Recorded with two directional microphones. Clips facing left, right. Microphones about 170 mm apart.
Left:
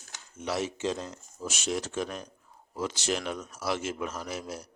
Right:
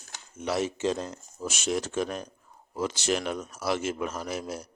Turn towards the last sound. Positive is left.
turn(degrees=-50)  # may be behind; listen again after turning